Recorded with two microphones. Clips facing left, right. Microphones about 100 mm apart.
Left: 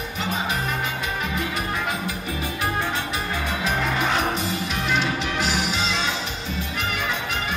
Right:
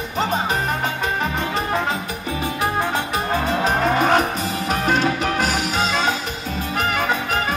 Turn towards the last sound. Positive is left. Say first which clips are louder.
# right 6 dB
turn(degrees=-45)  # may be behind; listen again after turning